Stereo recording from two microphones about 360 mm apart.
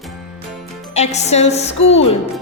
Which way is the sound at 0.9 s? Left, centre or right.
Centre.